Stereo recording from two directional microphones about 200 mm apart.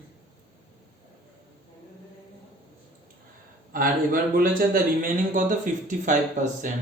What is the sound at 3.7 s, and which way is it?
A man's voice, 45° right (ahead or behind).